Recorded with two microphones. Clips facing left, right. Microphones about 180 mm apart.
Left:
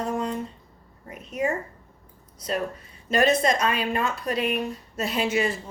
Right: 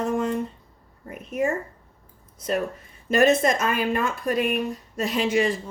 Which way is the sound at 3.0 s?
50° right (ahead or behind).